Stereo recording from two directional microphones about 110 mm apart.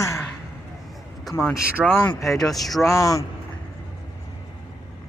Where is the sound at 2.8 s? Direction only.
30° left (ahead or behind).